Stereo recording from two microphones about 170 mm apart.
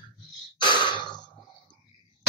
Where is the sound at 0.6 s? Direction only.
25° left (ahead or behind).